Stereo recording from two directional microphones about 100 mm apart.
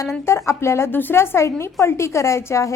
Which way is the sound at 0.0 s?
30° left (ahead or behind).